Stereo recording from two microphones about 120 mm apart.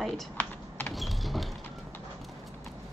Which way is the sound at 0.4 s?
15° left (ahead or behind).